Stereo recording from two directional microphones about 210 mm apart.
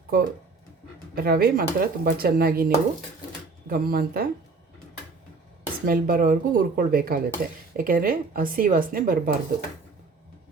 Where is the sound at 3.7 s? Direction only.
45° right (ahead or behind).